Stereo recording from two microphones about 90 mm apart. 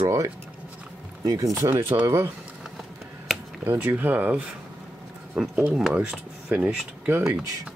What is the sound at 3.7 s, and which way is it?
Speech, 20° right (ahead or behind).